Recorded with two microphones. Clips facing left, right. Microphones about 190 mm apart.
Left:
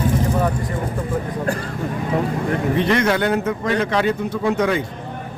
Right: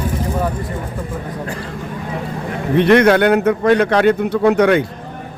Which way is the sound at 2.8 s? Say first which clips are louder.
Right 10 dB; 65° right (ahead or behind).